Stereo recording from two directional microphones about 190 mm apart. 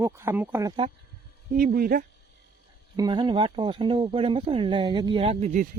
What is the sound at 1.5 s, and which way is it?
Speech, 50° right (ahead or behind).